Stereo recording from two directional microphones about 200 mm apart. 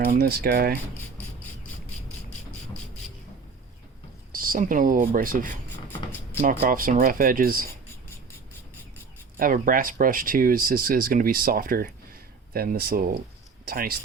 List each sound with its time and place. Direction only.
0.0 s speech: 50° right (ahead or behind)
4.3 s speech: 45° right (ahead or behind)
9.4 s speech: 45° right (ahead or behind)